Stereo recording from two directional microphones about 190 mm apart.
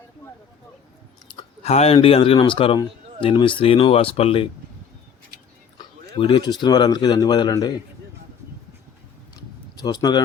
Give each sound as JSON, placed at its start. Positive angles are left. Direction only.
{"t": 1.3, "sound": "speech", "side_deg": 30}
{"t": 6.1, "sound": "speech", "side_deg": 25}
{"t": 9.3, "sound": "a sound", "side_deg": 20}